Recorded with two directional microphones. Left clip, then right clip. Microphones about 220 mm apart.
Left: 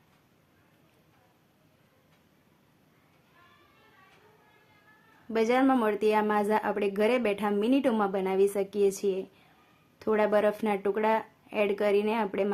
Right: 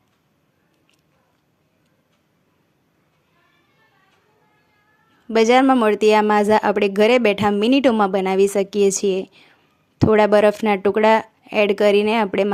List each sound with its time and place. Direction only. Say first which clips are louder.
5.3 s a woman's voice: right 11 dB; 35° right (ahead or behind)